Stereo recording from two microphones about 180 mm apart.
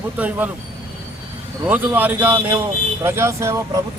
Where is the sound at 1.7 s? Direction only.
10° right (ahead or behind).